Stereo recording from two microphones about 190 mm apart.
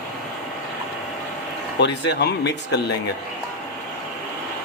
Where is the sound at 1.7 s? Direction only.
65° left (ahead or behind).